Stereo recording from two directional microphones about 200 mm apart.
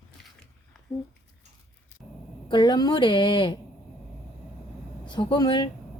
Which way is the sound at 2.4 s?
20° left (ahead or behind).